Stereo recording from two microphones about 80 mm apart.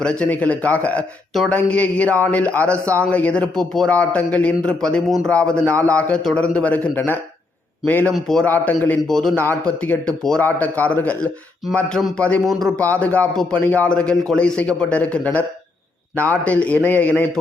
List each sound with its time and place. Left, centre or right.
0.0 s a man's voice: centre
5.0 s a man's voice: centre
5.3 s a man's voice: centre
8.1 s a man's voice: centre
8.4 s a man's voice: left
9.0 s a man's voice: centre
9.3 s a man's voice: left